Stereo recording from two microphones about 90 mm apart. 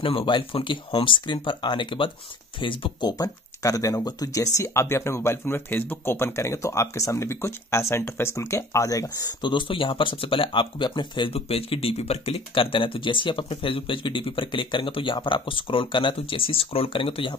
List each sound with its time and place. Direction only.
0.0 s speech: 75° left (ahead or behind); by 9.3 s 40° left (ahead or behind)
9.4 s speech: 65° left (ahead or behind)